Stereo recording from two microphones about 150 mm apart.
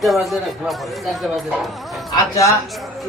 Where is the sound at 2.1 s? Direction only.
20° left (ahead or behind).